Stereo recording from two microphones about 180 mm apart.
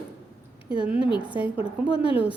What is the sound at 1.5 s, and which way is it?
Speech, 30° left (ahead or behind).